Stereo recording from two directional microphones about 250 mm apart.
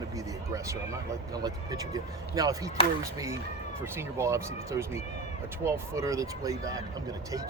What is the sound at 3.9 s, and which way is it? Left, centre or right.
Speech, centre.